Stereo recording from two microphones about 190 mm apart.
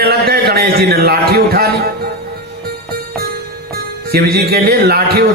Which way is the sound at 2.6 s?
55° right (ahead or behind).